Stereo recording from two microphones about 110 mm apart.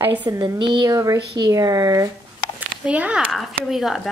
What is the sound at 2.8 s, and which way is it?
A woman's voice, 10° right (ahead or behind).